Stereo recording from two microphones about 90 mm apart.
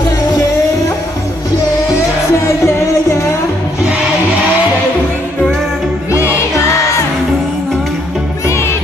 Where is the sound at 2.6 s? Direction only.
30° left (ahead or behind).